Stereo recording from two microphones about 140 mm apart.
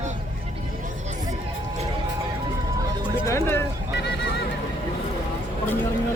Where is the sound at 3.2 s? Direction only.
20° left (ahead or behind).